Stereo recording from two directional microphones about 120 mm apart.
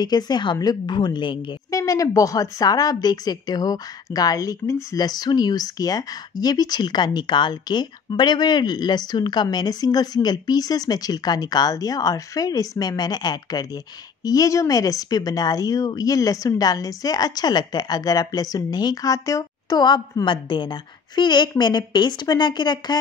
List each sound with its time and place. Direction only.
0.0 s speech: 35° left (ahead or behind)
1.7 s speech: 30° left (ahead or behind)